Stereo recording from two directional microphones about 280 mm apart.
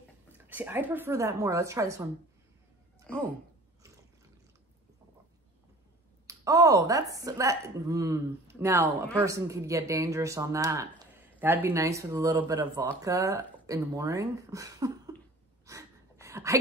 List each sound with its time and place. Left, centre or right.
0.3 s speech: centre
6.2 s speech: centre
15.6 s a sound: centre